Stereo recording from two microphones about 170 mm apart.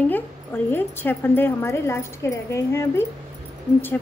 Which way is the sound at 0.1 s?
10° left (ahead or behind).